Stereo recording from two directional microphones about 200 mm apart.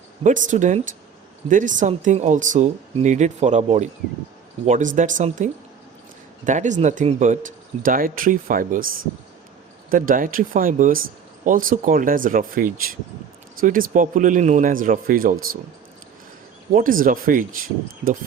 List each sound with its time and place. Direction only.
0.2 s speech: 35° right (ahead or behind)
9.9 s speech: 45° right (ahead or behind)
16.7 s speech: 45° right (ahead or behind)